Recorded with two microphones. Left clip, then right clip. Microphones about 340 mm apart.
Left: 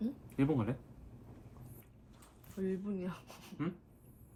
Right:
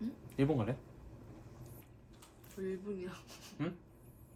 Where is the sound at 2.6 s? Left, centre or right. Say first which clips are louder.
Left 1 dB; centre.